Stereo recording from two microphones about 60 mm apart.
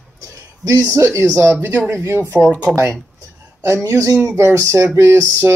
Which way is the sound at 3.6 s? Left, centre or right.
Right.